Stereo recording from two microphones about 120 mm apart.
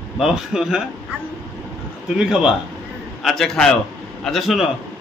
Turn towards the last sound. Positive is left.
turn(degrees=0)  # may be behind; listen again after turning